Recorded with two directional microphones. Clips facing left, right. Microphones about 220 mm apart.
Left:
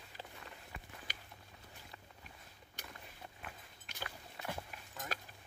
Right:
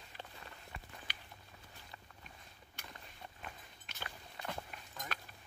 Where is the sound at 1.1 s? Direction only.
45° left (ahead or behind).